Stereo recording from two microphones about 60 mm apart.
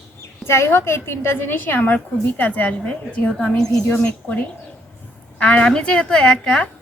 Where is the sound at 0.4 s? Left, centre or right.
Left.